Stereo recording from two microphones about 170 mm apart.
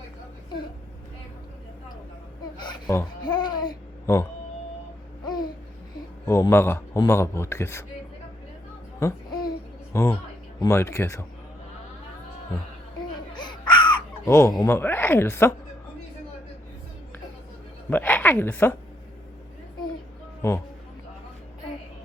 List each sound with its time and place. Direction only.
2.6 s a sound: 25° left (ahead or behind)
3.2 s babbling: 25° left (ahead or behind)
6.2 s a man's voice: 15° left (ahead or behind)
9.0 s babbling: 20° left (ahead or behind)
9.9 s speech: 15° left (ahead or behind)
13.3 s baby cry: 25° left (ahead or behind)
14.3 s speech: 15° left (ahead or behind)
17.9 s a woman's voice: 10° left (ahead or behind)
20.4 s speech: 15° left (ahead or behind)